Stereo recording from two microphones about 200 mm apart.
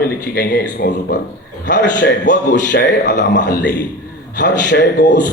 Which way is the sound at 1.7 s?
60° left (ahead or behind).